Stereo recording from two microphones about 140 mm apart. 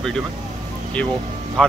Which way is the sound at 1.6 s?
5° left (ahead or behind).